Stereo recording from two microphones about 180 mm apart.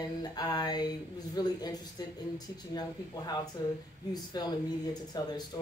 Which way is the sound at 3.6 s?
20° left (ahead or behind).